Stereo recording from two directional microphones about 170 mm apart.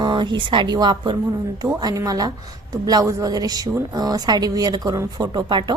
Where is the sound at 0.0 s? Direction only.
25° right (ahead or behind).